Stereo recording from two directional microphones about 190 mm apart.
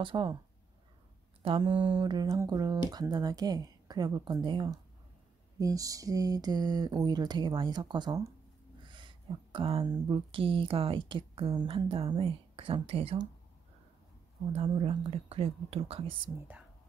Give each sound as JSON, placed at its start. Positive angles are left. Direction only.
{"t": 0.0, "sound": "speech", "side_deg": -25}
{"t": 1.4, "sound": "speech", "side_deg": -30}
{"t": 14.5, "sound": "speech", "side_deg": -30}